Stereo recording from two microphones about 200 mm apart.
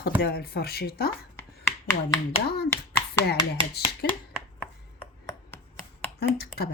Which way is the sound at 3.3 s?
55° left (ahead or behind).